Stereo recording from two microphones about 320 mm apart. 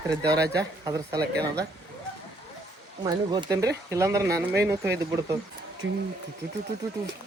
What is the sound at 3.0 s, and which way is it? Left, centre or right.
A man's voice, centre.